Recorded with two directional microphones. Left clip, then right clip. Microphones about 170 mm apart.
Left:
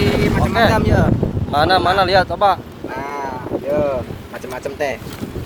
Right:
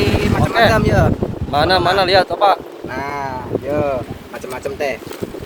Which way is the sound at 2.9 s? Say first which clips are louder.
Right 2 dB; 45° right (ahead or behind).